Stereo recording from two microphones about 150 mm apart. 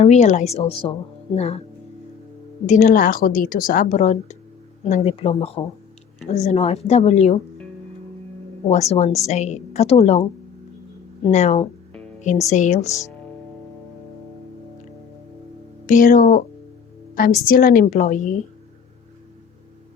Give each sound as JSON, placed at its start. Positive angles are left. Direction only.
{"t": 0.0, "sound": "a woman's voice", "side_deg": 50}
{"t": 2.6, "sound": "a woman's voice", "side_deg": 55}
{"t": 8.7, "sound": "a woman's voice", "side_deg": 45}
{"t": 11.3, "sound": "a woman's voice", "side_deg": 50}
{"t": 12.9, "sound": "speech", "side_deg": 20}
{"t": 15.9, "sound": "a woman's voice", "side_deg": 60}
{"t": 18.0, "sound": "a woman's voice", "side_deg": 55}